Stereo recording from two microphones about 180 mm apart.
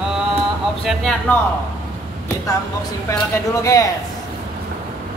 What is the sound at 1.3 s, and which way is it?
Speech, 10° left (ahead or behind).